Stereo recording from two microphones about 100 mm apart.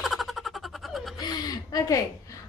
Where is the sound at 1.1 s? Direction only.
45° left (ahead or behind).